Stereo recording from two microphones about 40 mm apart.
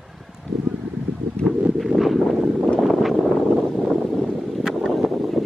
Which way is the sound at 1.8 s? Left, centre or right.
Centre.